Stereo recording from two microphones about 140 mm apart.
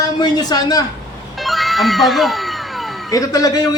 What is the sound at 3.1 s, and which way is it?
Speech, 25° left (ahead or behind).